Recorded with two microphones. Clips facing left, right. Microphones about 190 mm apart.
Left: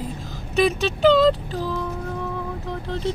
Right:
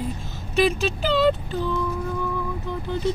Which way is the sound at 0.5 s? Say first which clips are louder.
Left 1 dB; centre (ahead or behind).